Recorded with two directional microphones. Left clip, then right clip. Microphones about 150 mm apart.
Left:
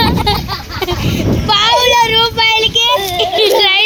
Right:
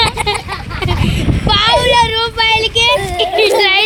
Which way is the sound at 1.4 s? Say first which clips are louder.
Left 1 dB; 45° left (ahead or behind).